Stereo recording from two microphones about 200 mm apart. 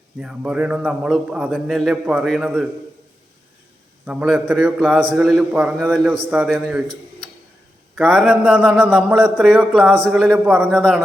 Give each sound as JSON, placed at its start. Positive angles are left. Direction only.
{"t": 0.2, "sound": "a man's voice", "side_deg": -5}
{"t": 4.0, "sound": "a man's voice", "side_deg": -5}
{"t": 7.9, "sound": "a man's voice", "side_deg": 0}